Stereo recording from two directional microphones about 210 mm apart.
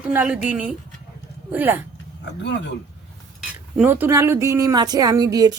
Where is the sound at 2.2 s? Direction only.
55° left (ahead or behind).